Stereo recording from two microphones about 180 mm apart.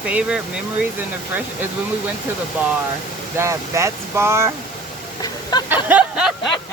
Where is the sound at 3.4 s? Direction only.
15° right (ahead or behind).